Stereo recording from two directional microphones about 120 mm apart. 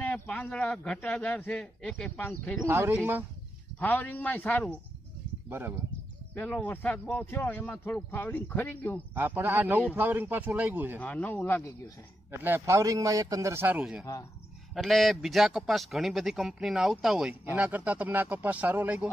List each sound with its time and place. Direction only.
0.0 s speech: 10° left (ahead or behind)
2.7 s a man's voice: 20° right (ahead or behind)
3.8 s speech: 15° left (ahead or behind)
5.5 s a man's voice: 20° right (ahead or behind)
6.3 s speech: 10° left (ahead or behind)
9.1 s a man's voice: 15° right (ahead or behind)
11.0 s speech: 15° left (ahead or behind)
12.3 s a man's voice: 20° right (ahead or behind)
13.7 s a man's voice: 5° right (ahead or behind)